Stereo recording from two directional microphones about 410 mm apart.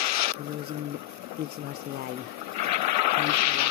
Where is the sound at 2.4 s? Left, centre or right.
Right.